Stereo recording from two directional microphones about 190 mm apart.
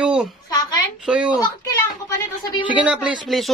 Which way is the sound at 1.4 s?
15° left (ahead or behind).